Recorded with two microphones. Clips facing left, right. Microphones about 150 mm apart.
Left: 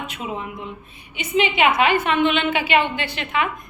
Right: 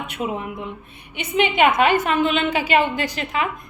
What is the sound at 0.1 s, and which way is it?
A woman's voice, 55° right (ahead or behind).